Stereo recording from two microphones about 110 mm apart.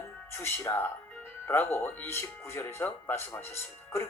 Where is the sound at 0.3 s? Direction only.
25° left (ahead or behind).